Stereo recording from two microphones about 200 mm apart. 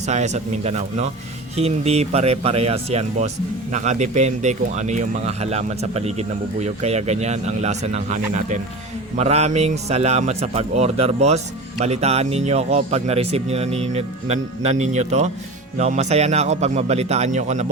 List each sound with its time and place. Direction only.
0.1 s speech: 35° right (ahead or behind)